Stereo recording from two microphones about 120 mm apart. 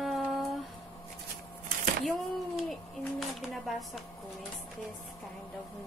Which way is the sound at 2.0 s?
Centre (ahead or behind).